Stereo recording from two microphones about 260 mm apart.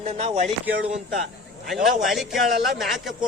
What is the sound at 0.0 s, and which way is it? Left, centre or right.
Speech, right.